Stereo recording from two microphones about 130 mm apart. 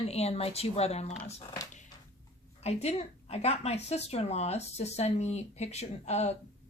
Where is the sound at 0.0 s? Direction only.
55° left (ahead or behind).